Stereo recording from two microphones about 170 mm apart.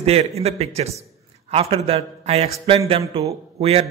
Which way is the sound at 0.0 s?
35° right (ahead or behind).